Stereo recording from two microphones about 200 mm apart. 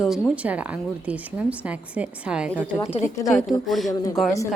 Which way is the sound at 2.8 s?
35° left (ahead or behind).